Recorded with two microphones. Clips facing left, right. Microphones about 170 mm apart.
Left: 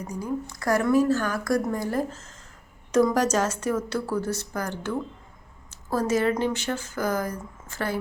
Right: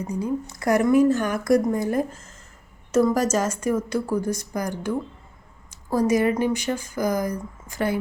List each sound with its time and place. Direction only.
0.0 s a woman's voice: 20° right (ahead or behind)